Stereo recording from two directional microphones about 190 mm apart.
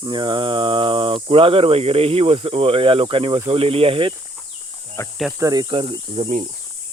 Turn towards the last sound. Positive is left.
turn(degrees=-25)  # may be behind; listen again after turning